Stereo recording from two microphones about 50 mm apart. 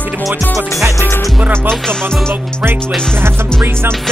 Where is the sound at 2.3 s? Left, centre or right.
Right.